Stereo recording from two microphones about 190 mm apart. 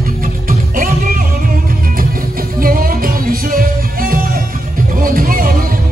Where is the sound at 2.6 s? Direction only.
50° right (ahead or behind).